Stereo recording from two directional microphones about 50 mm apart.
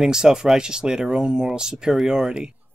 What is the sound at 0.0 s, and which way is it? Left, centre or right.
Speech, centre.